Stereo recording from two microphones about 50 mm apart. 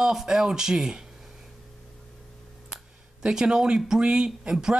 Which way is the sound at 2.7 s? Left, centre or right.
Centre.